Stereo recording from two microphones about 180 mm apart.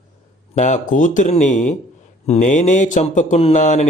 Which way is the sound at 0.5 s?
40° left (ahead or behind).